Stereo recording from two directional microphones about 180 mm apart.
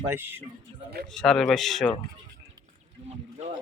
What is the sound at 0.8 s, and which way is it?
Speech, 65° right (ahead or behind).